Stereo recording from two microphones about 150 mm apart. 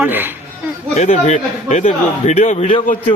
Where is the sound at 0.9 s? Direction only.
50° left (ahead or behind).